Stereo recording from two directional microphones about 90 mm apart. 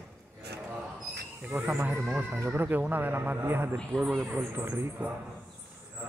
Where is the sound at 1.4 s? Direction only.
15° right (ahead or behind).